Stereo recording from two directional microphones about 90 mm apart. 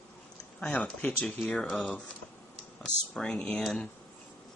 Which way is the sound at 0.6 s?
10° left (ahead or behind).